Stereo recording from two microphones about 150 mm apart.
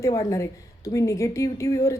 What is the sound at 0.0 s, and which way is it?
A woman's voice, 25° left (ahead or behind).